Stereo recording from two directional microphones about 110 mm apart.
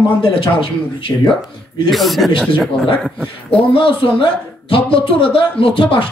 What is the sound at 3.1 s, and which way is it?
Speech, 10° left (ahead or behind).